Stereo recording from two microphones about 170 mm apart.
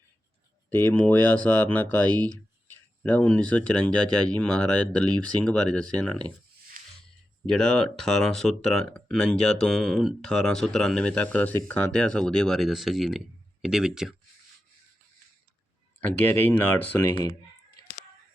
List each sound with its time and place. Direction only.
0.7 s speech: 10° left (ahead or behind)
2.0 s speech: 25° right (ahead or behind)
3.0 s speech: 10° left (ahead or behind)
6.8 s music: 55° right (ahead or behind)
7.4 s speech: 5° left (ahead or behind)
16.0 s speech: 10° left (ahead or behind)